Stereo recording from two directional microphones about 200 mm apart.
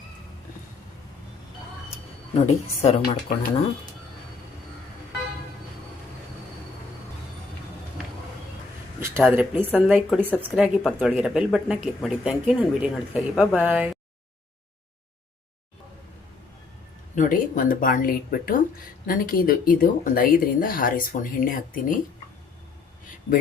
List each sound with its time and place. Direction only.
2.3 s speech: 30° left (ahead or behind)
9.0 s a sound: 15° right (ahead or behind)
9.3 s a woman's voice: 10° right (ahead or behind)
17.2 s speech: 40° left (ahead or behind)